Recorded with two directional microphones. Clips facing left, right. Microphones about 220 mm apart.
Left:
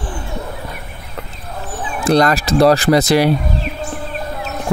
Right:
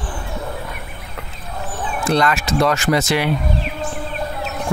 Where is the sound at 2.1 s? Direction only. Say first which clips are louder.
Left 5 dB; 35° left (ahead or behind).